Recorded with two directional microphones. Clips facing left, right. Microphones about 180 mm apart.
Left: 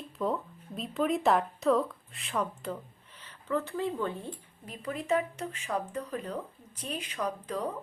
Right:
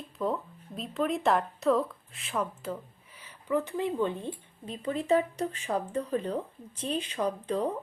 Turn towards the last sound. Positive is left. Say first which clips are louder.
# right 4 dB
turn(degrees=-30)  # may be behind; listen again after turning